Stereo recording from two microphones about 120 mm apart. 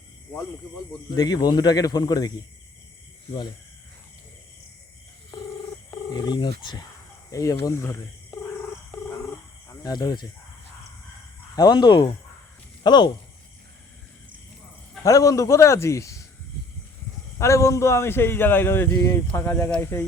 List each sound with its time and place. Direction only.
1.1 s a man's voice: 35° left (ahead or behind)
6.1 s a man's voice: 40° left (ahead or behind)
7.3 s a man's voice: 30° left (ahead or behind)
9.8 s a man's voice: 35° left (ahead or behind)
11.5 s a man's voice: 35° left (ahead or behind)
15.0 s a man's voice: 30° left (ahead or behind)
17.3 s a man's voice: 25° left (ahead or behind)